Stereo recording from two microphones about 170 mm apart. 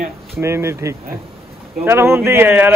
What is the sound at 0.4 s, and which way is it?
A man's voice, 15° right (ahead or behind).